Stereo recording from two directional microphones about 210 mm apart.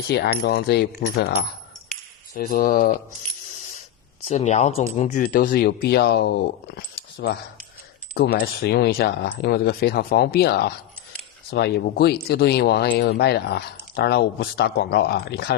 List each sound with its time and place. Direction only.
0.1 s speech: 50° left (ahead or behind)
4.3 s speech: 35° left (ahead or behind); by 15.5 s 50° left (ahead or behind)